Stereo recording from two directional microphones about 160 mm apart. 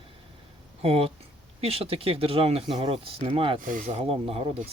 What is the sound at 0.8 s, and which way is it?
Speech, 40° right (ahead or behind).